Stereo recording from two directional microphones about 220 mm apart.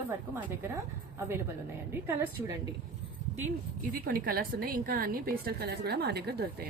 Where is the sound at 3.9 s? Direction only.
40° right (ahead or behind).